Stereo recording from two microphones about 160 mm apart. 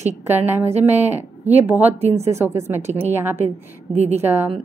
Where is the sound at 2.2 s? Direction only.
15° right (ahead or behind).